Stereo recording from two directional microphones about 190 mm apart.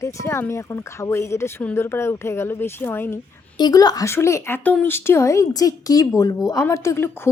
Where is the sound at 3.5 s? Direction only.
20° left (ahead or behind).